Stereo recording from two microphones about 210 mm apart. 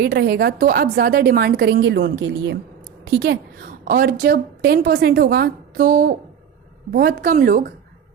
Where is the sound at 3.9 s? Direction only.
45° right (ahead or behind).